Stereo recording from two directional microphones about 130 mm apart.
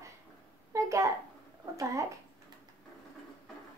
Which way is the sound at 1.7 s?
25° right (ahead or behind).